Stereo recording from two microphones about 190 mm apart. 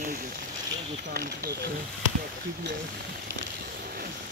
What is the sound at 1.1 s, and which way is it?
Speech, 50° right (ahead or behind).